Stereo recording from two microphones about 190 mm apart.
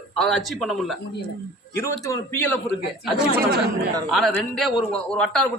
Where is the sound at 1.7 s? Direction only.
15° left (ahead or behind).